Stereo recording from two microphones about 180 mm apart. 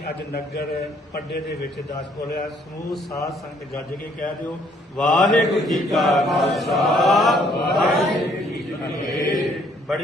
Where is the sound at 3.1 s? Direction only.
20° left (ahead or behind).